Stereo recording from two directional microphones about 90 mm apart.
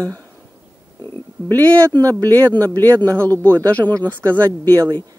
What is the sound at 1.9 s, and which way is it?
Speech, 40° right (ahead or behind).